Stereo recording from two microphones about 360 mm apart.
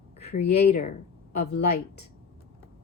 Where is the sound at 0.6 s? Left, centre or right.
Centre.